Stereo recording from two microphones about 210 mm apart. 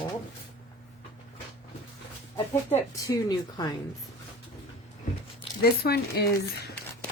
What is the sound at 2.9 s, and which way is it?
Speech, 15° left (ahead or behind).